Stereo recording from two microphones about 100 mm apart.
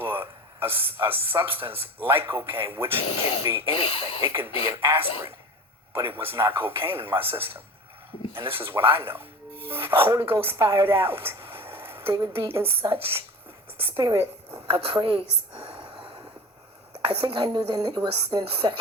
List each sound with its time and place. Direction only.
0.0 s speech: 25° right (ahead or behind)
3.7 s speech: 65° left (ahead or behind)
4.2 s a man's voice: 25° right (ahead or behind)
13.9 s a woman's voice: 45° right (ahead or behind)
14.7 s a woman's voice: 65° right (ahead or behind)
15.8 s a sound: 50° right (ahead or behind)
17.0 s a woman's voice: 55° right (ahead or behind)